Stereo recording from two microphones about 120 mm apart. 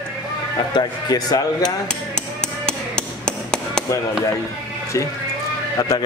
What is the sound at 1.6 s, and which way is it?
Hammer, 10° left (ahead or behind).